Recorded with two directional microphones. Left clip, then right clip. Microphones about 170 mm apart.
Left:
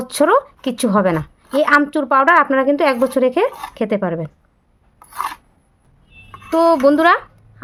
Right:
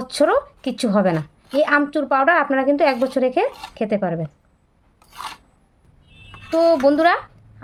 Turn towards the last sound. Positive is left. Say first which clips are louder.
# left 3 dB
turn(degrees=35)  # may be behind; listen again after turning